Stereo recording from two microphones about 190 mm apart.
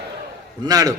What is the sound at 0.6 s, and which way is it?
Speech, 20° right (ahead or behind).